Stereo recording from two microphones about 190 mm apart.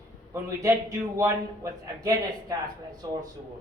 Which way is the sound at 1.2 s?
20° right (ahead or behind).